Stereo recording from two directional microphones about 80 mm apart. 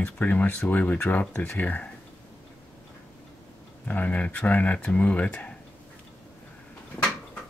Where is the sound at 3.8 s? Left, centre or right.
Left.